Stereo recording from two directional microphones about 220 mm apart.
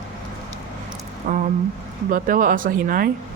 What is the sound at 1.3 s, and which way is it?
Speech, 40° right (ahead or behind).